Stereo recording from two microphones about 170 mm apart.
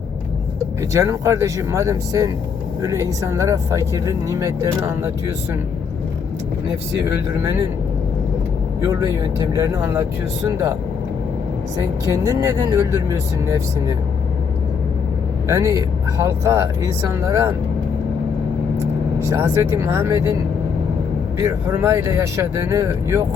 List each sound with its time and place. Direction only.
0.8 s speech: 20° right (ahead or behind)
6.9 s speech: 20° right (ahead or behind)
8.8 s speech: 20° right (ahead or behind)
11.8 s speech: 15° right (ahead or behind)
15.4 s speech: 20° right (ahead or behind)
19.3 s speech: 15° right (ahead or behind)
21.3 s speech: 15° right (ahead or behind)